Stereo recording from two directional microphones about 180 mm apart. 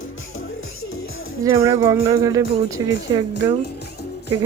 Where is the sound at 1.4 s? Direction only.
15° right (ahead or behind).